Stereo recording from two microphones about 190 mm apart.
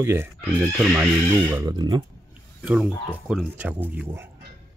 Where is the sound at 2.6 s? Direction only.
5° right (ahead or behind).